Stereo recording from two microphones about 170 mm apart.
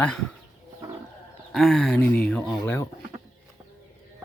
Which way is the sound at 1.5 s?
Centre (ahead or behind).